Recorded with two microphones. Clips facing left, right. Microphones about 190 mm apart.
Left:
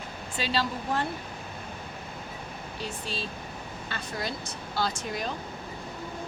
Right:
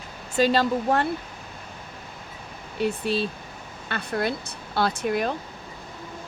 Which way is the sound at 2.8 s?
60° right (ahead or behind).